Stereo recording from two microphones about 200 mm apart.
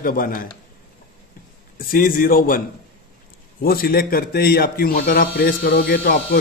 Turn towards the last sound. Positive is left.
turn(degrees=55)  # may be behind; listen again after turning